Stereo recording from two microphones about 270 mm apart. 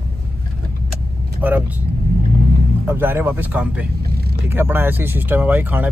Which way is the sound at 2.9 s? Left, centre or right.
Centre.